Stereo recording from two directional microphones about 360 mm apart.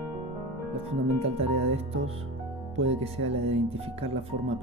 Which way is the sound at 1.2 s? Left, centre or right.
Centre.